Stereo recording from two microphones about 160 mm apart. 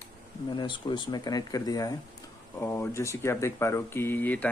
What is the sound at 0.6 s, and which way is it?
Speech, 30° left (ahead or behind).